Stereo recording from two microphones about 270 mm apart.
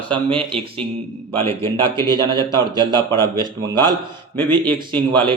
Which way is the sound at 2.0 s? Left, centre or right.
Centre.